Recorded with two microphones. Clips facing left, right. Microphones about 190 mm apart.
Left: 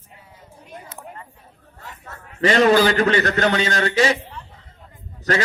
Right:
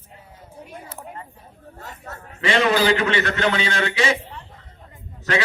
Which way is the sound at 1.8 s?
40° right (ahead or behind).